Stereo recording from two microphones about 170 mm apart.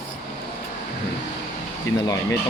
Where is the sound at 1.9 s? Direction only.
90° left.